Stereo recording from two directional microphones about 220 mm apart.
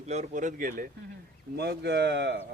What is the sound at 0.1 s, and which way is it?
Speech, 35° right (ahead or behind).